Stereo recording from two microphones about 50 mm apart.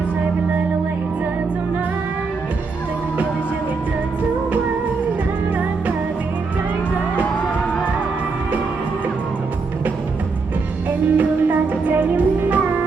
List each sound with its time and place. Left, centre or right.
10.8 s music: right